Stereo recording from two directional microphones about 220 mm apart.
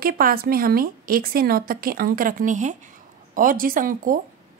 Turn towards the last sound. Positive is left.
turn(degrees=-40)  # may be behind; listen again after turning